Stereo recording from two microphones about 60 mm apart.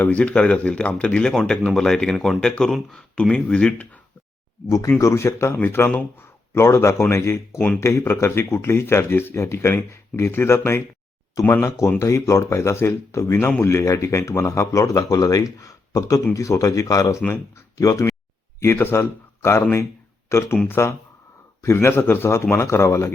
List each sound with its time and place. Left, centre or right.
0.2 s speech: centre
2.4 s speech: centre
4.9 s speech: left
6.5 s speech: left
11.4 s speech: left
11.9 s speech: left
16.3 s speech: left
18.6 s speech: left